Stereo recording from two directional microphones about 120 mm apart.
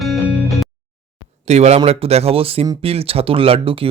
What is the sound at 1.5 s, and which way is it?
Speech, 65° right (ahead or behind).